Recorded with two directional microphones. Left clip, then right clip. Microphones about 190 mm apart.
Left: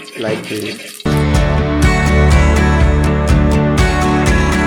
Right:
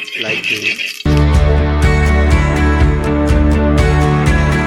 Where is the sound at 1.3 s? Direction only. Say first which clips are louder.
Left 1 dB; centre (ahead or behind).